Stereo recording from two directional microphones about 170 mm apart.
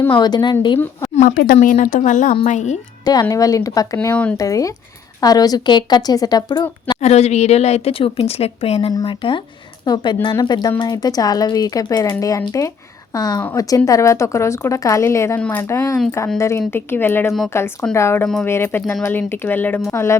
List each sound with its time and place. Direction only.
0.2 s speech: 25° left (ahead or behind)
1.1 s a woman's voice: 50° left (ahead or behind)
1.5 s a woman's voice: 45° left (ahead or behind)
3.0 s speech: 20° left (ahead or behind)
4.1 s speech: 10° left (ahead or behind)
4.4 s speech: 20° left (ahead or behind)
7.0 s a woman's voice: 40° left (ahead or behind); by 20.1 s 15° left (ahead or behind)